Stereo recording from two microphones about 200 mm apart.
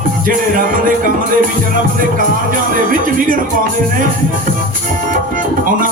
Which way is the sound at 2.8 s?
45° right (ahead or behind).